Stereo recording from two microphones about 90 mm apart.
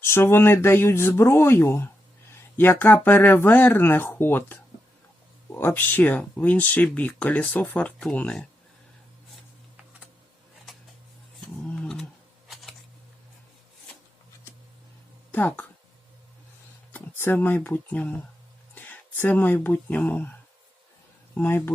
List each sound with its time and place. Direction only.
0.0 s speech: 30° left (ahead or behind)
11.6 s roaring cats: 10° left (ahead or behind)
15.3 s speech: 20° left (ahead or behind)
16.9 s speech: 20° left (ahead or behind)
21.3 s speech: 25° left (ahead or behind)